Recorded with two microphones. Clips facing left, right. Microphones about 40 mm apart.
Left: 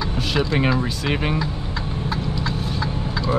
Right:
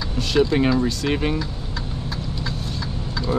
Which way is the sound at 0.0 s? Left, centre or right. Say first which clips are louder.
Right 3 dB; centre.